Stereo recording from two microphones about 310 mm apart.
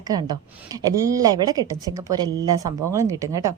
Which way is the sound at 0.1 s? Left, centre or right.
Centre.